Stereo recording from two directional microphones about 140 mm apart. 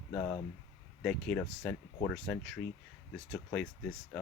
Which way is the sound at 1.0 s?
10° left (ahead or behind).